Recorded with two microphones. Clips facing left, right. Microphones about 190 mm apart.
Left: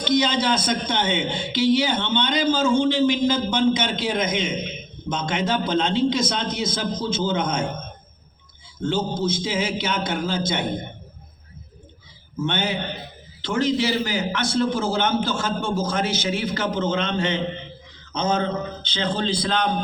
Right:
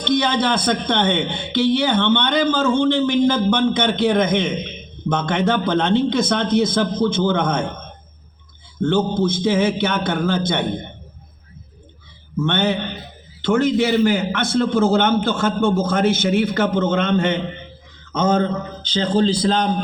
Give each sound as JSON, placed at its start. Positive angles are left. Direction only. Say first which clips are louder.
{"t": 0.0, "sound": "a man's voice", "louder": "right 2 dB", "side_deg": -60}
{"t": 8.8, "sound": "a man's voice", "louder": "right 6 dB", "side_deg": -60}
{"t": 12.4, "sound": "a man's voice", "louder": "right 5 dB", "side_deg": -60}